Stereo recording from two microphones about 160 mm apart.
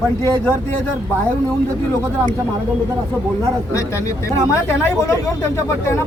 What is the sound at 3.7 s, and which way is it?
A woman's voice, 20° left (ahead or behind).